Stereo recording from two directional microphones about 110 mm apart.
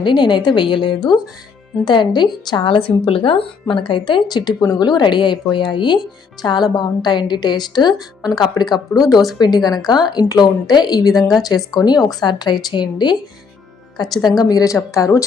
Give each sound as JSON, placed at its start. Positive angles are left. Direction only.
{"t": 0.0, "sound": "a woman's voice", "side_deg": 45}